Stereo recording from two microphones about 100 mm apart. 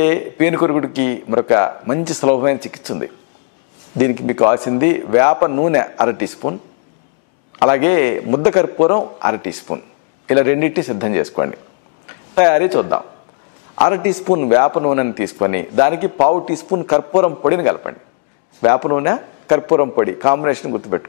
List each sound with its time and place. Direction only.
0.0 s a man's voice: 15° left (ahead or behind)
7.5 s a man's voice: 15° left (ahead or behind)